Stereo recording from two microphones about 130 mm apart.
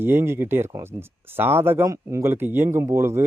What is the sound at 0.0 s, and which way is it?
Speech, 15° right (ahead or behind).